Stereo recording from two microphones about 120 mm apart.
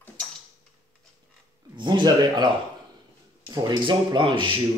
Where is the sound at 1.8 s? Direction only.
40° right (ahead or behind).